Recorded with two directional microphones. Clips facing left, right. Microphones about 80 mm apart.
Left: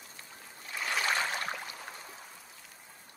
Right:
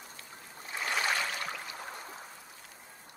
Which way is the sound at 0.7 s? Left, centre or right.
Centre.